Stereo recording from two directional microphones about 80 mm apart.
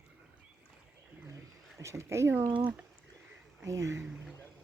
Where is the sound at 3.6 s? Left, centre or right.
Right.